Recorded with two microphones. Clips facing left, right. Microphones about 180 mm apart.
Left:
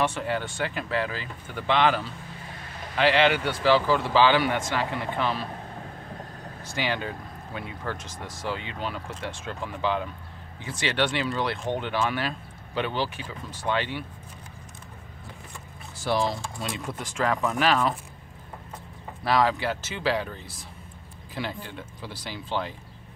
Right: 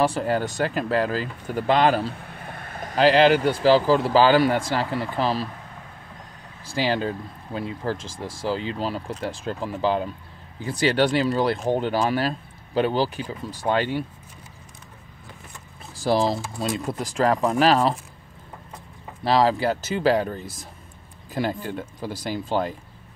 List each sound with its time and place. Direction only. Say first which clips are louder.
0.0 s speech: right 5 dB; 35° right (ahead or behind)
2.1 s vehicle: right 3 dB; 60° right (ahead or behind)
3.0 s speech: right 5 dB; 35° right (ahead or behind)
6.6 s speech: right 6 dB; 35° right (ahead or behind)
16.0 s speech: right 5 dB; 35° right (ahead or behind)
19.2 s speech: right 4 dB; 30° right (ahead or behind)